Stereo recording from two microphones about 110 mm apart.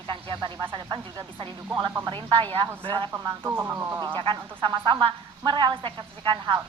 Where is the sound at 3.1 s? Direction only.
25° right (ahead or behind).